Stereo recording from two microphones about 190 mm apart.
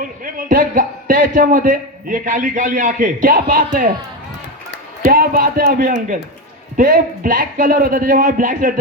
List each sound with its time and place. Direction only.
0.0 s a man's voice: 45° right (ahead or behind)
5.0 s a man's voice: 50° right (ahead or behind)